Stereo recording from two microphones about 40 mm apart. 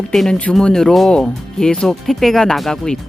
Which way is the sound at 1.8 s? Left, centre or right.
Centre.